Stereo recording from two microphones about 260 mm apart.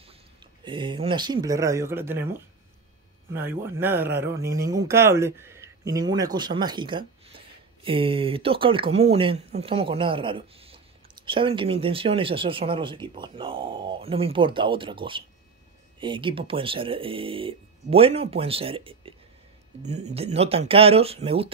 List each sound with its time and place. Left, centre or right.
0.7 s speech: centre